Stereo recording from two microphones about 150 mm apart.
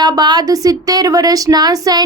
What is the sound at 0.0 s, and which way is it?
A woman's voice, 25° right (ahead or behind).